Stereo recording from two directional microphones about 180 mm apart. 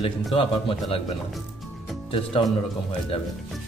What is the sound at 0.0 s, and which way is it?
Speech, 30° left (ahead or behind).